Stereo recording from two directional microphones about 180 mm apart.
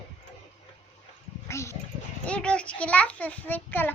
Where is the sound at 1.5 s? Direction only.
15° left (ahead or behind).